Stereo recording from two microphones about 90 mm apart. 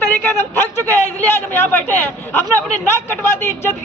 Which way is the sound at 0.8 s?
25° left (ahead or behind).